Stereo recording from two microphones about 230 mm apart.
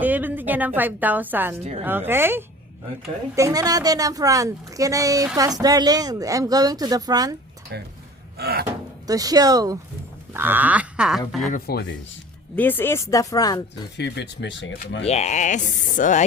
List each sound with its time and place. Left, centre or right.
0.0 s a woman's voice: centre
7.7 s a sound: right
8.6 s speech: centre
11.5 s speech: left
12.5 s speech: centre
13.9 s speech: left
15.0 s speech: left